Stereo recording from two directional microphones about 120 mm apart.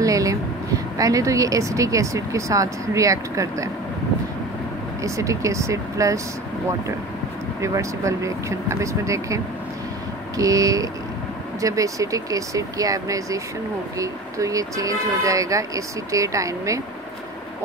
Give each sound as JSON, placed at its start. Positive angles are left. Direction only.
{"t": 0.0, "sound": "a sound", "side_deg": -30}
{"t": 0.9, "sound": "speech", "side_deg": -30}
{"t": 5.0, "sound": "speech", "side_deg": -25}
{"t": 7.6, "sound": "speech", "side_deg": -25}